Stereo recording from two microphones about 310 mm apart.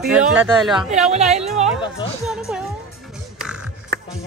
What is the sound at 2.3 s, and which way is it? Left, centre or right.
Speech, centre.